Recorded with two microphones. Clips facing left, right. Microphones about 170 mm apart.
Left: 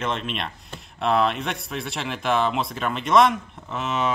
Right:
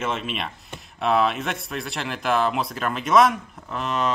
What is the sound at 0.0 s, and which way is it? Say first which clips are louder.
Speech: even; 5° right (ahead or behind).